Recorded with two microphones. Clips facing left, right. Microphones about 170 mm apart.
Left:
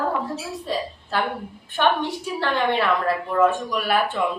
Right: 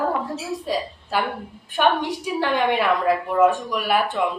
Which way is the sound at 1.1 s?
10° right (ahead or behind).